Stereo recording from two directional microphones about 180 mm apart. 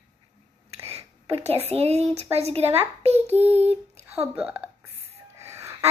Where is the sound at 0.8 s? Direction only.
35° right (ahead or behind).